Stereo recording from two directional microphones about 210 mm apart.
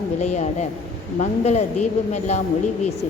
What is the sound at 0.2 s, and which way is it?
A woman's voice, 30° left (ahead or behind).